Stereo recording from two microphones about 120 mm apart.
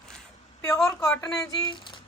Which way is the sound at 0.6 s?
25° left (ahead or behind).